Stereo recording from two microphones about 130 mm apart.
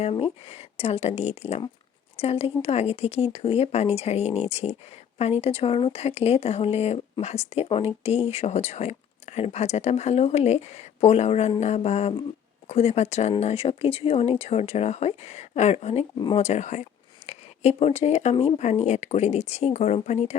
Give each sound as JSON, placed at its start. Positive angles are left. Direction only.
{"t": 0.0, "sound": "speech", "side_deg": 50}
{"t": 16.1, "sound": "speech", "side_deg": 40}
{"t": 16.4, "sound": "speech", "side_deg": 60}